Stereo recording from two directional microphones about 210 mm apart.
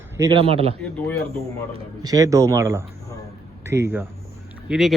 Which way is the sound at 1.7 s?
20° right (ahead or behind).